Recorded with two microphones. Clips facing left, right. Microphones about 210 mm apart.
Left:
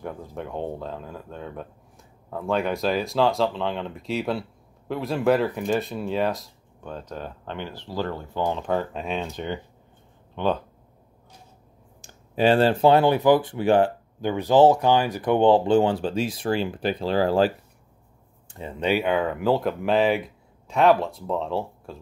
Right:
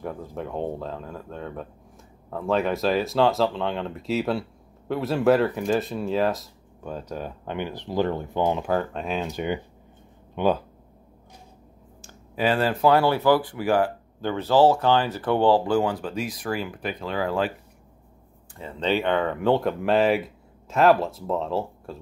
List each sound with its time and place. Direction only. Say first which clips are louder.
0.0 s speech: right 1 dB; centre (ahead or behind); by 8.6 s 15° right (ahead or behind)
8.6 s speech: right 1 dB; centre (ahead or behind)
12.4 s speech: left 4 dB; 30° left (ahead or behind)
18.5 s speech: left 1 dB; 20° left (ahead or behind); by 21.9 s centre (ahead or behind)